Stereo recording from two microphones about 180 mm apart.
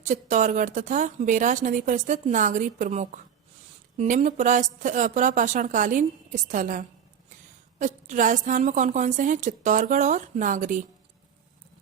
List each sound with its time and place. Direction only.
0.1 s a woman's voice: 45° right (ahead or behind)